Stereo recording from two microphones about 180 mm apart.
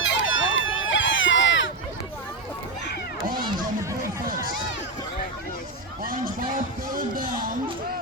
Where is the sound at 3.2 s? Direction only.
50° right (ahead or behind).